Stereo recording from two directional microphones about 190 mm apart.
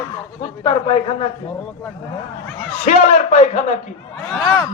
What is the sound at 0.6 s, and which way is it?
Speech, 25° left (ahead or behind).